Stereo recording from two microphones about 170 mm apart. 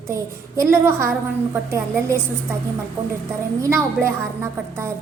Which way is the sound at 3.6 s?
15° right (ahead or behind).